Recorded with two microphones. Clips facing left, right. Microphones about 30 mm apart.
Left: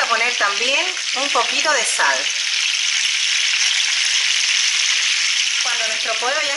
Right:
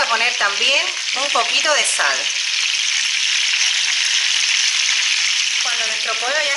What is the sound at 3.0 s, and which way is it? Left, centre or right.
Frying, centre.